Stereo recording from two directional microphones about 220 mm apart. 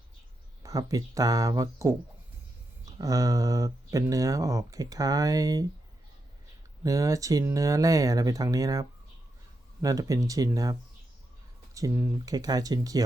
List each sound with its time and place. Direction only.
0.6 s speech: 15° right (ahead or behind)
3.0 s speech: 15° right (ahead or behind)
6.8 s speech: 15° right (ahead or behind)